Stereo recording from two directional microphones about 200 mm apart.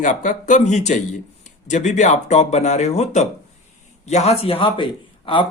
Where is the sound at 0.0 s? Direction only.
40° left (ahead or behind).